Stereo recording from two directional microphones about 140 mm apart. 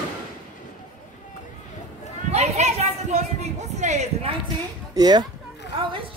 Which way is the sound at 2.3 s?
50° right (ahead or behind).